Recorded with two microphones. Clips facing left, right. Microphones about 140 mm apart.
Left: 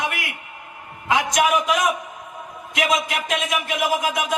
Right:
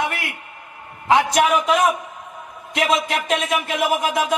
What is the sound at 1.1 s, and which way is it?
Speech, 30° right (ahead or behind).